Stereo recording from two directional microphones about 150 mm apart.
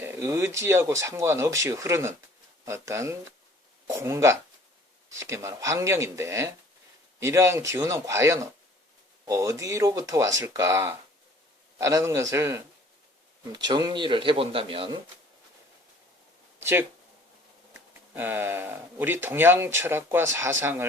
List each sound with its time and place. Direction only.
0.0 s speech: 20° right (ahead or behind); by 14.9 s 35° right (ahead or behind)
16.6 s speech: 15° right (ahead or behind)